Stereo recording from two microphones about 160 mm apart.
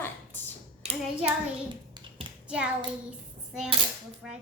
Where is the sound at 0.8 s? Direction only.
40° right (ahead or behind).